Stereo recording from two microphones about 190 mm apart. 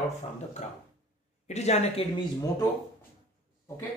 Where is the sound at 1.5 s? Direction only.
35° left (ahead or behind).